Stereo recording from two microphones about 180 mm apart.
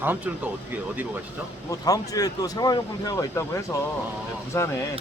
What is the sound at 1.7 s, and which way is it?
Speech, 20° left (ahead or behind).